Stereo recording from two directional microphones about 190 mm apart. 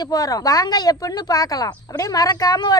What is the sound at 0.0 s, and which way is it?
Speech, 20° left (ahead or behind).